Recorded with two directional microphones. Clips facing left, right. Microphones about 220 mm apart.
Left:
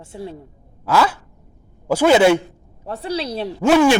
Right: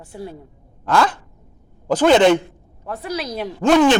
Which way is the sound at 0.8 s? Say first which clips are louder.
Even; 5° left (ahead or behind).